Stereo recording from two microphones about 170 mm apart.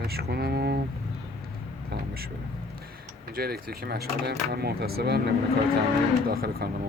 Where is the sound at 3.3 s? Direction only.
65° right (ahead or behind).